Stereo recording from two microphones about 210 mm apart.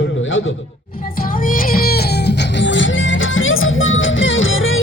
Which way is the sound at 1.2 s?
40° left (ahead or behind).